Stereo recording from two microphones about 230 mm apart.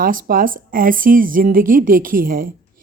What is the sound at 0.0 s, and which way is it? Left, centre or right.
Speech, right.